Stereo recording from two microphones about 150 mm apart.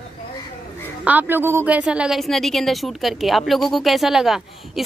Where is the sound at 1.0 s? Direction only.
10° right (ahead or behind).